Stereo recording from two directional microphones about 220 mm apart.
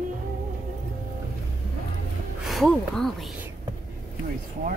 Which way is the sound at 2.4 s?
Centre (ahead or behind).